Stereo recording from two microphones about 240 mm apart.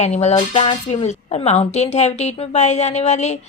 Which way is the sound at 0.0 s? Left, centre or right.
Left.